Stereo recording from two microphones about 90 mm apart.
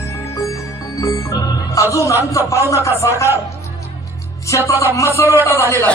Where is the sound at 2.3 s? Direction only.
35° left (ahead or behind).